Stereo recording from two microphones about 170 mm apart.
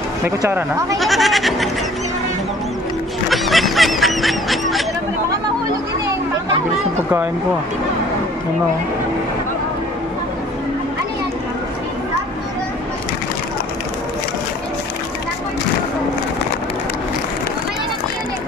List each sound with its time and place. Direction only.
0.4 s speech: 15° right (ahead or behind)
0.9 s speech: centre (ahead or behind)
3.3 s honk: centre (ahead or behind)